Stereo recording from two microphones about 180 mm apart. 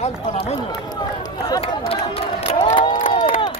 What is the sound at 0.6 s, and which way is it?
Run, 25° left (ahead or behind).